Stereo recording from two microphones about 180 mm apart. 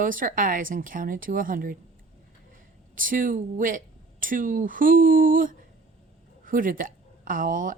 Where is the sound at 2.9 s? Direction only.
50° right (ahead or behind).